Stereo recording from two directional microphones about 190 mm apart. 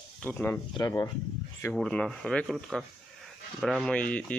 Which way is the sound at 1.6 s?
5° left (ahead or behind).